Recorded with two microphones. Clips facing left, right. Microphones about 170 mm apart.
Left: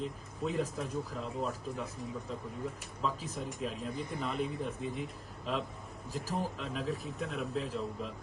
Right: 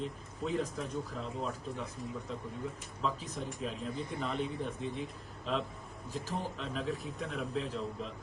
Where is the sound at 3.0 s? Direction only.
Centre (ahead or behind).